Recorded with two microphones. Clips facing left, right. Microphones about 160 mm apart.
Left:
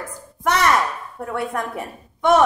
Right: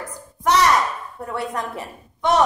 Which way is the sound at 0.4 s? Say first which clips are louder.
Right 2 dB; 55° left (ahead or behind).